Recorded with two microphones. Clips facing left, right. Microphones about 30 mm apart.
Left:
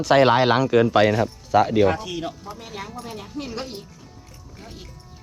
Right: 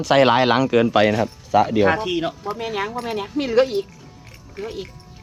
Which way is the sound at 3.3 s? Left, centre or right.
Right.